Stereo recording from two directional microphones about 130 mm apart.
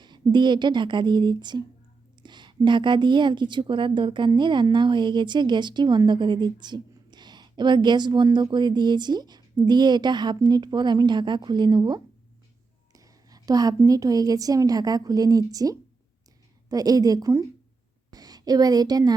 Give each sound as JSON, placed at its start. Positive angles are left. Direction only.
{"t": 0.0, "sound": "a woman's voice", "side_deg": -35}